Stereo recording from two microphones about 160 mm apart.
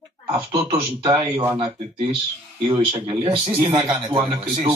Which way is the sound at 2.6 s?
35° right (ahead or behind).